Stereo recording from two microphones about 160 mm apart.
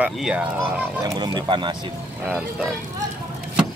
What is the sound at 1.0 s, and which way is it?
Speech, 25° right (ahead or behind).